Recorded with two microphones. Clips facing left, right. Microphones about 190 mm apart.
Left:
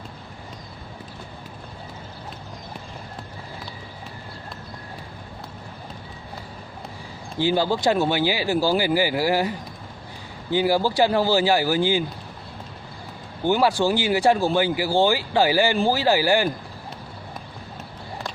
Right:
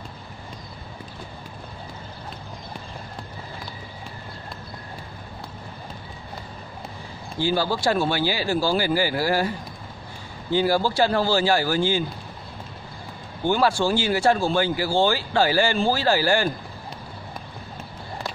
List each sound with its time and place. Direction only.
7.3 s speech: 15° left (ahead or behind)
13.4 s speech: 15° left (ahead or behind)